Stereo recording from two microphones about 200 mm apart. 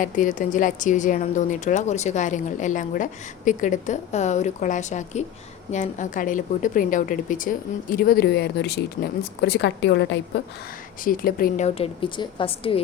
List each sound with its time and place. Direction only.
0.0 s a woman's voice: 40° left (ahead or behind); by 10.2 s 60° left (ahead or behind)
11.0 s a woman's voice: 45° left (ahead or behind); by 12.8 s 30° left (ahead or behind)